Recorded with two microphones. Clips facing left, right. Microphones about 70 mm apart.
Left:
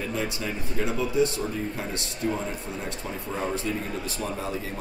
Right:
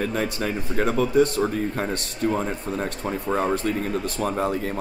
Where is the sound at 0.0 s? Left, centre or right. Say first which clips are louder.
Right 5 dB; right.